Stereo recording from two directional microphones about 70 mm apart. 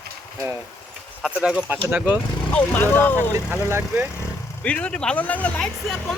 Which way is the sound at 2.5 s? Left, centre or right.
Left.